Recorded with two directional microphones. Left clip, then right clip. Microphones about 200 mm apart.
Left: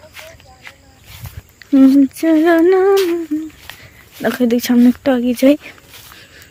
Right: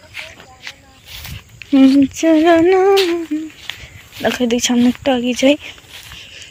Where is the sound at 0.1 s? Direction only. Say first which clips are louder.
Right 10 dB; 15° right (ahead or behind).